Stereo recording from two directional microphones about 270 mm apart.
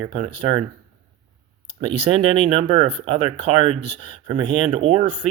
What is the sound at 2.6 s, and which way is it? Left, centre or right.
Speech, right.